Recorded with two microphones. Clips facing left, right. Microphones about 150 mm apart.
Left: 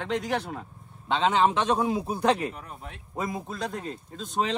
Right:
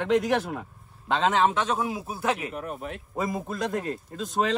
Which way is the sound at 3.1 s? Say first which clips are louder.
Right 2 dB; centre (ahead or behind).